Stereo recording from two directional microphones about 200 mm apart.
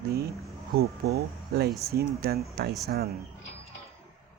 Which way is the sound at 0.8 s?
50° right (ahead or behind).